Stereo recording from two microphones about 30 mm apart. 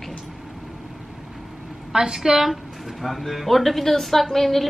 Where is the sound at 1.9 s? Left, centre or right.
Centre.